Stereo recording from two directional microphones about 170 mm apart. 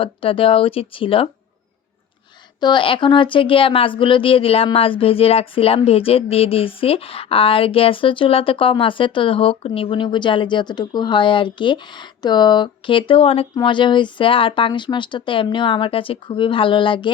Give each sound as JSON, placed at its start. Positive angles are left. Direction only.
{"t": 0.0, "sound": "speech", "side_deg": 30}
{"t": 2.6, "sound": "speech", "side_deg": 25}